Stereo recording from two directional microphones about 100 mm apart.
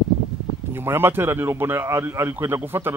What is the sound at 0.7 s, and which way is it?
A man's voice, 25° right (ahead or behind).